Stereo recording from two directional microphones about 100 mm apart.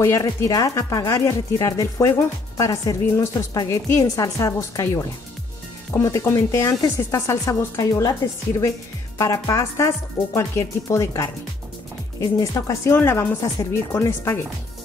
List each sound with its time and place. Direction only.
0.0 s speech: 30° left (ahead or behind)
9.2 s speech: 30° left (ahead or behind)
13.4 s speech: 35° left (ahead or behind)